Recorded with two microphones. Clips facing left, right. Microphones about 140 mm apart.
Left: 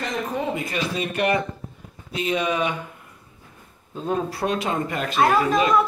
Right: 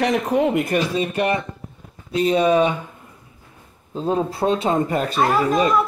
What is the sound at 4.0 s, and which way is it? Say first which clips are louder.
Speech: right 4 dB; 25° right (ahead or behind).